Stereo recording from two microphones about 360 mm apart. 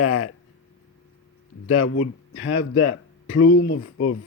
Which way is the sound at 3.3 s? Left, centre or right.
Left.